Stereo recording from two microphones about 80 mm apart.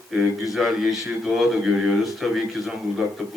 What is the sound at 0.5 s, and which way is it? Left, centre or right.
Speech, centre.